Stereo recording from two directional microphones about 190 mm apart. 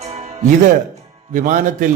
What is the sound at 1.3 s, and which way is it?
Speech, 40° right (ahead or behind).